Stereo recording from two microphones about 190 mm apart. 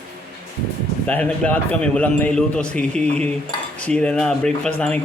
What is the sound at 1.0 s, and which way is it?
A man's voice, 10° left (ahead or behind).